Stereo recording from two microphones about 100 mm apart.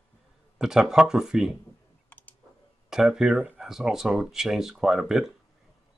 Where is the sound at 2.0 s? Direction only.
15° left (ahead or behind).